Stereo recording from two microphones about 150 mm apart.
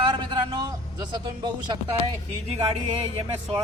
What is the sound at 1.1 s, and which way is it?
Speech, 30° right (ahead or behind).